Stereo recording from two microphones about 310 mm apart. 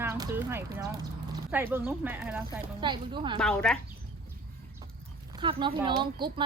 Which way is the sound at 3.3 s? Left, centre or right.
Centre.